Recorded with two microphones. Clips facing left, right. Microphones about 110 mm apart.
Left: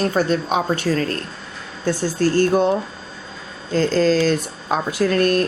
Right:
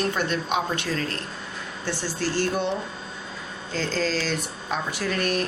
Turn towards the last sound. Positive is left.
turn(degrees=45)  # may be behind; listen again after turning